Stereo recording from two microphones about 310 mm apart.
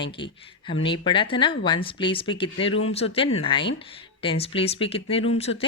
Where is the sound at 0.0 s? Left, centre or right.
Centre.